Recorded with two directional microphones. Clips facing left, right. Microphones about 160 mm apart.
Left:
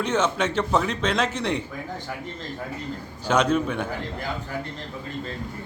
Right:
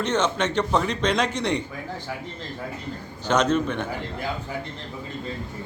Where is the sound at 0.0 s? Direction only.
5° left (ahead or behind).